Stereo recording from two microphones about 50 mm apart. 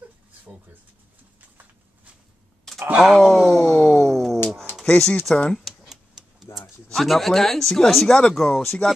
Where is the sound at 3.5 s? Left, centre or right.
Centre.